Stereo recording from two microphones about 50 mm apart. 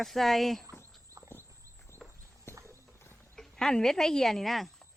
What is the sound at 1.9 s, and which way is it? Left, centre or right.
Walk, right.